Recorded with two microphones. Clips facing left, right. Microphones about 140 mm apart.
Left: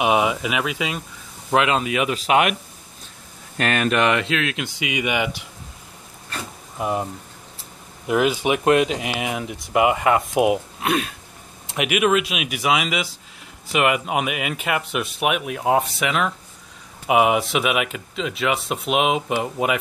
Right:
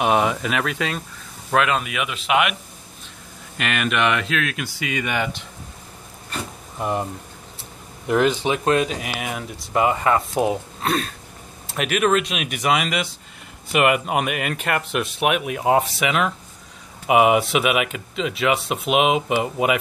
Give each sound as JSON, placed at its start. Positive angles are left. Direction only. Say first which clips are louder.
{"t": 0.0, "sound": "speech", "louder": "even", "side_deg": 5}
{"t": 1.5, "sound": "speech", "louder": "left 1 dB", "side_deg": 25}
{"t": 3.5, "sound": "speech", "louder": "left 3 dB", "side_deg": 35}
{"t": 6.8, "sound": "speech", "louder": "even", "side_deg": 5}
{"t": 8.1, "sound": "speech", "louder": "even", "side_deg": 5}